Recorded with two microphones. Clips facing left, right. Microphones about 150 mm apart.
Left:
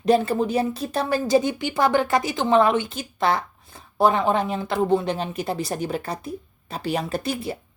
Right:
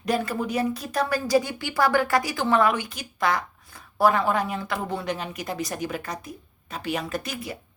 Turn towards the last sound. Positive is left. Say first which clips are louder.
# left 5 dB
turn(degrees=30)  # may be behind; listen again after turning